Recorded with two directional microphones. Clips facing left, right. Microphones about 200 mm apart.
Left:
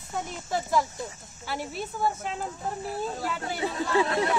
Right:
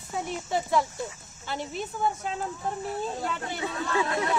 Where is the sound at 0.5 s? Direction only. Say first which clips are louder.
Even; centre (ahead or behind).